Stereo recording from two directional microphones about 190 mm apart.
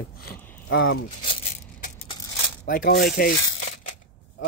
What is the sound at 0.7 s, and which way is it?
Speech, 90° left.